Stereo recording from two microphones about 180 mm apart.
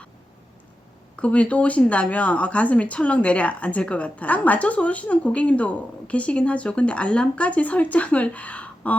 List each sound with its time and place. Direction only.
1.1 s speech: 5° left (ahead or behind)